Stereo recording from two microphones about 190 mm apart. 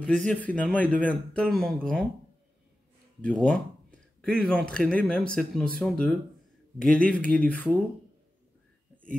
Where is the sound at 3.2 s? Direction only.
5° left (ahead or behind).